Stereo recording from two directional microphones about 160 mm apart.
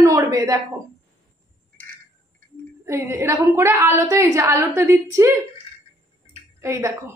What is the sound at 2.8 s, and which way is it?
A woman's voice, 15° right (ahead or behind).